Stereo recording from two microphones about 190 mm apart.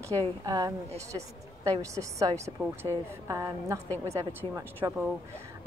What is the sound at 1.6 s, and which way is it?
A woman's voice, 15° right (ahead or behind).